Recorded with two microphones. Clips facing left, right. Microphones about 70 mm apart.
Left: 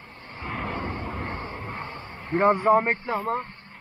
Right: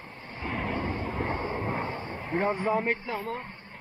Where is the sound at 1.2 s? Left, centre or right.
Centre.